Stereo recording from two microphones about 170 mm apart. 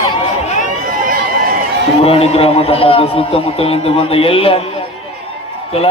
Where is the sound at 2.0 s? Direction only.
35° left (ahead or behind).